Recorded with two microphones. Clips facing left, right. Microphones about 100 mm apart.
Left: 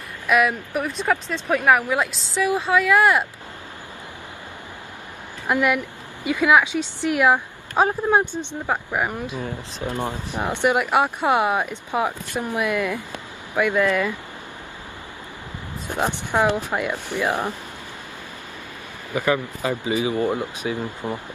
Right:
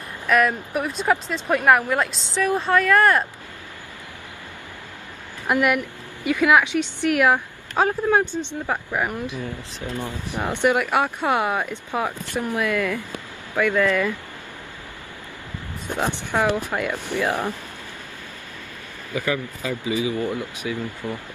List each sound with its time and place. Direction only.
0.3 s speech: 5° left (ahead or behind)
5.7 s a woman's voice: 20° left (ahead or behind)
15.9 s speech: 15° left (ahead or behind)
19.8 s speech: 25° left (ahead or behind)